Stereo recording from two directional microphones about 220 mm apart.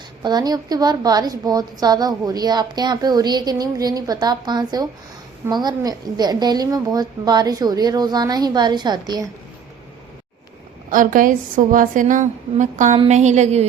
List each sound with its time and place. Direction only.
0.2 s a woman's voice: 20° right (ahead or behind)
10.9 s a woman's voice: 40° right (ahead or behind)